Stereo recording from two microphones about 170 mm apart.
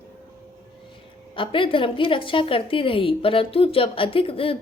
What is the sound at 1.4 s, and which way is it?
A woman's voice, 30° left (ahead or behind).